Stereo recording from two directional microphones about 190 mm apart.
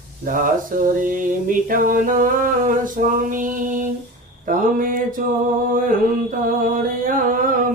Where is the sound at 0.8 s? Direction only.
45° right (ahead or behind).